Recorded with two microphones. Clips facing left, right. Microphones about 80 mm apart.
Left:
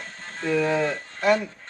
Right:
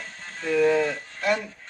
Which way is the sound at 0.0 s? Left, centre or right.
Left.